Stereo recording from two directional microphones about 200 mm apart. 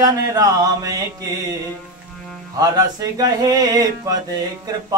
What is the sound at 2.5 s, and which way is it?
Music, 20° right (ahead or behind).